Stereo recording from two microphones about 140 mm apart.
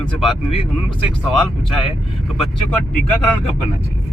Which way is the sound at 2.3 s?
Centre (ahead or behind).